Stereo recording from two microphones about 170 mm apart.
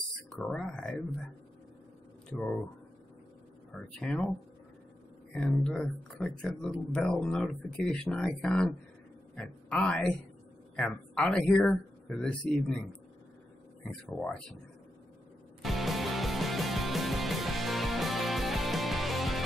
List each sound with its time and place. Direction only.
0.3 s speech: 5° left (ahead or behind)
2.3 s speech: 5° left (ahead or behind)
3.7 s speech: 5° left (ahead or behind)
5.3 s a man's voice: 5° left (ahead or behind)
14.0 s speech: 5° left (ahead or behind)
15.6 s music: centre (ahead or behind)